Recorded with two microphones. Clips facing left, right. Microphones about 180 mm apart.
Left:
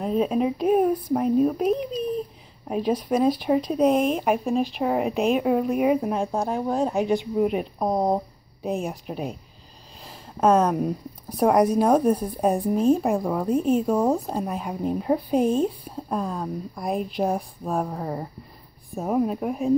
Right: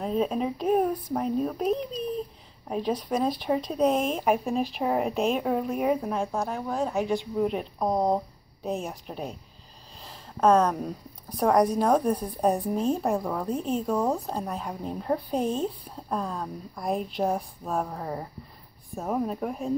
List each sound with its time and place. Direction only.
0.0 s speech: 5° left (ahead or behind)
5.9 s a woman's voice: 20° left (ahead or behind)